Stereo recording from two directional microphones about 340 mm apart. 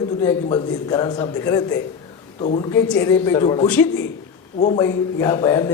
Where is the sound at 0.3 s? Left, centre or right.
Centre.